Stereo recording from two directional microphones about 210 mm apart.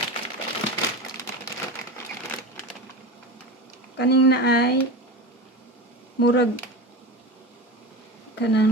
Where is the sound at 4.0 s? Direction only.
50° left (ahead or behind).